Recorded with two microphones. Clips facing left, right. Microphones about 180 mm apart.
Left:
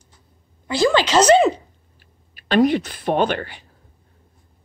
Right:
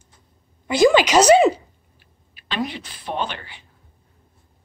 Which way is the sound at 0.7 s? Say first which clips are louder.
Right 3 dB; 15° right (ahead or behind).